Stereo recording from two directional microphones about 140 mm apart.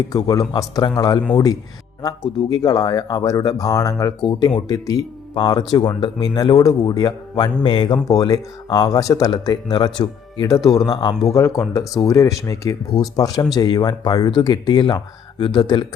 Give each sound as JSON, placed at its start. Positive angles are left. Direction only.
{"t": 0.1, "sound": "speech", "side_deg": 25}